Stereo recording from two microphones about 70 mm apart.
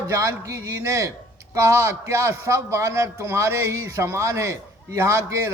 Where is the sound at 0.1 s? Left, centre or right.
Right.